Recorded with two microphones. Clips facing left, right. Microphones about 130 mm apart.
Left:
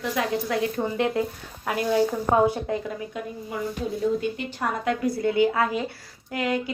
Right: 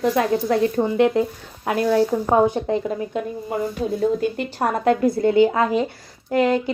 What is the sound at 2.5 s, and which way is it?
Speech, 25° right (ahead or behind).